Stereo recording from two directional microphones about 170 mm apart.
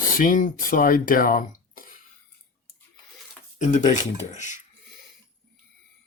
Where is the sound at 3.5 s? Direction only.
45° left (ahead or behind).